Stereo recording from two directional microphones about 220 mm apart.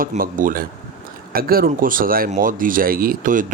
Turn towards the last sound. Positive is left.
turn(degrees=-35)  # may be behind; listen again after turning